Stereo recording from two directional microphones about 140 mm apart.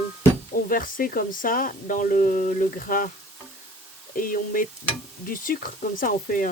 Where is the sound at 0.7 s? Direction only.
90° left.